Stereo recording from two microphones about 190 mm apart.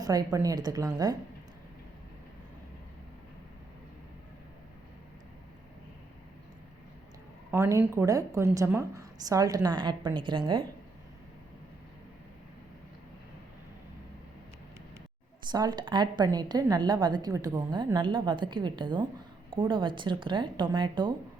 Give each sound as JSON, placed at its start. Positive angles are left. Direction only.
{"t": 0.0, "sound": "a woman's voice", "side_deg": -20}
{"t": 7.5, "sound": "a woman's voice", "side_deg": -15}
{"t": 15.5, "sound": "a woman's voice", "side_deg": -20}